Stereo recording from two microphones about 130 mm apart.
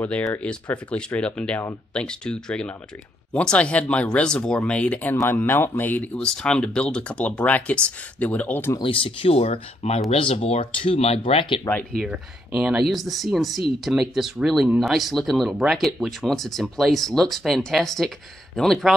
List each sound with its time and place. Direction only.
0.0 s speech: 10° left (ahead or behind)
8.7 s speech: 40° left (ahead or behind)
12.0 s speech: 5° right (ahead or behind)